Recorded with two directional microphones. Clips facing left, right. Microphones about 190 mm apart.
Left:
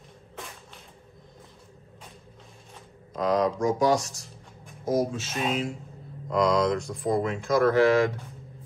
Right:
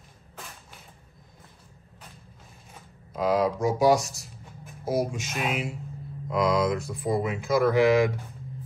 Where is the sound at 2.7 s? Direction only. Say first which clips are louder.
Left 1 dB; 5° right (ahead or behind).